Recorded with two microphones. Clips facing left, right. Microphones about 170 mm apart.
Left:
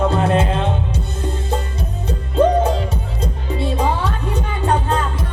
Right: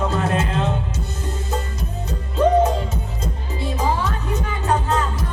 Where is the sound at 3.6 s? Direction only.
30° left (ahead or behind).